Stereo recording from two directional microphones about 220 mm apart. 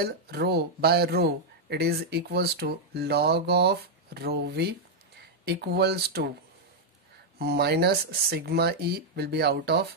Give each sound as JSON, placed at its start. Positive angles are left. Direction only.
{"t": 0.0, "sound": "speech", "side_deg": -45}
{"t": 7.3, "sound": "speech", "side_deg": -45}